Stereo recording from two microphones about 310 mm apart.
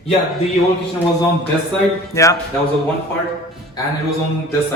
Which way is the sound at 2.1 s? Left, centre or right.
Centre.